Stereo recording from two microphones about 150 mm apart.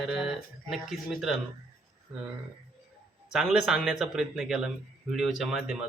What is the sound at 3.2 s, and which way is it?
Speech, 5° right (ahead or behind).